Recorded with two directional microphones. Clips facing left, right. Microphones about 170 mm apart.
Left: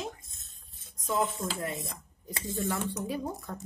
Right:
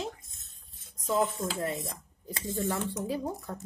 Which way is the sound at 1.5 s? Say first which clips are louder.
Right 3 dB; 30° right (ahead or behind).